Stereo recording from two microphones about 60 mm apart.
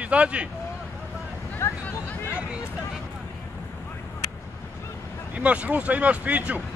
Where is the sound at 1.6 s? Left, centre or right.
Left.